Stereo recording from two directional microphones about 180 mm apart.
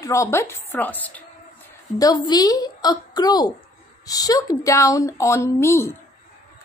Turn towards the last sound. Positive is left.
turn(degrees=15)  # may be behind; listen again after turning